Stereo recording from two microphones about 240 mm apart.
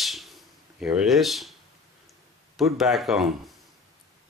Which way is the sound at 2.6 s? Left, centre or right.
Centre.